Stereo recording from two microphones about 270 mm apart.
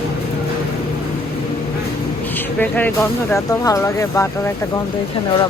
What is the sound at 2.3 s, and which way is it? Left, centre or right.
Speech, centre.